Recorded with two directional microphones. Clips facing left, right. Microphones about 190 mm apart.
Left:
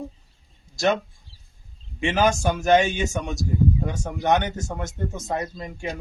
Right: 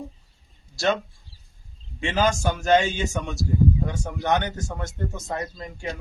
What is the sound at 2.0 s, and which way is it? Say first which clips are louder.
Speech: left 2 dB; 20° left (ahead or behind).